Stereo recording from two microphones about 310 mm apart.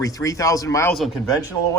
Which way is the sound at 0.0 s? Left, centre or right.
Centre.